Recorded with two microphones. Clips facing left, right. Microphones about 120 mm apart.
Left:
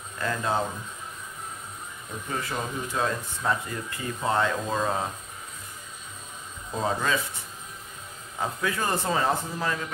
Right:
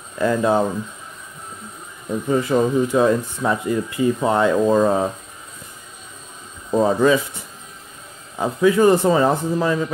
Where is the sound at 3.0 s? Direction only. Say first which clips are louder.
Right 8 dB; 15° right (ahead or behind).